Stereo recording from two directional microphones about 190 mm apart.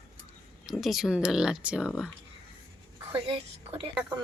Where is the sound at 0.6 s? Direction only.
Centre (ahead or behind).